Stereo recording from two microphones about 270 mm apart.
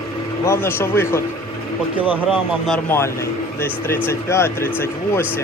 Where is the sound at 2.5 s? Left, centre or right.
Centre.